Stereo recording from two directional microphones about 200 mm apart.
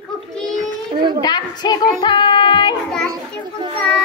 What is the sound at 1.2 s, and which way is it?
Speech, 20° left (ahead or behind).